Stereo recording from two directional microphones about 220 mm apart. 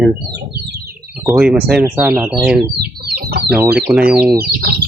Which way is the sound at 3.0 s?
45° right (ahead or behind).